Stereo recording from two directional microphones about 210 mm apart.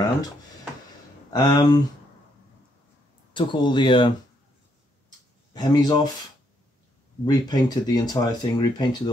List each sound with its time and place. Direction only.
1.3 s speech: 20° left (ahead or behind)
3.3 s speech: 25° left (ahead or behind)
5.5 s speech: 20° left (ahead or behind)
7.2 s speech: 20° left (ahead or behind)